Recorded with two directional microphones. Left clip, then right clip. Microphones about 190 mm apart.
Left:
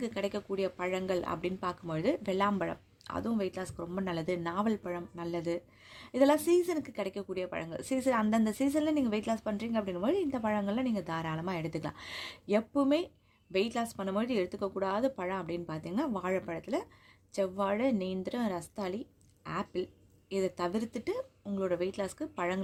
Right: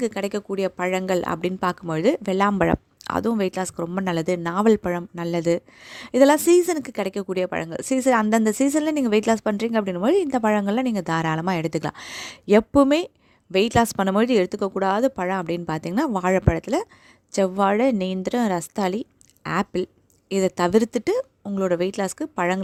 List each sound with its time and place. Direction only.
0.0 s speech: 40° right (ahead or behind)